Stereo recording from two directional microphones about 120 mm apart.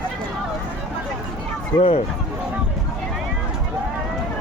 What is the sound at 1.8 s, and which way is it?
Speech, 60° left (ahead or behind).